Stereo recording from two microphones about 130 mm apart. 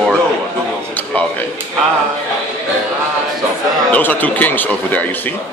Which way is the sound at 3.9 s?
15° left (ahead or behind).